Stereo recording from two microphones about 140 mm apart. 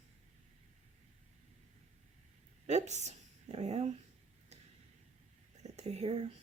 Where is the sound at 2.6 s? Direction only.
55° right (ahead or behind).